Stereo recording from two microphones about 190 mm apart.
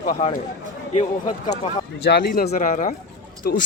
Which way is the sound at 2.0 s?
60° left (ahead or behind).